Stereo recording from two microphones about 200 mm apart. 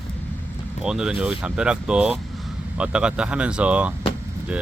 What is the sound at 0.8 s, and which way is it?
Speech, 5° right (ahead or behind).